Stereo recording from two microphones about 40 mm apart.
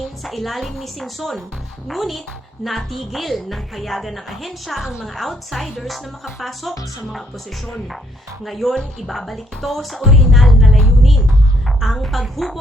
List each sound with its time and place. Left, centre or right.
0.3 s speech: centre
4.8 s a woman's voice: centre
5.0 s speech: centre
8.4 s speech: centre
11.8 s speech: centre